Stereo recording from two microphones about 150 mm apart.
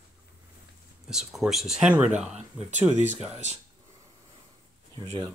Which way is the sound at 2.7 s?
50° right (ahead or behind).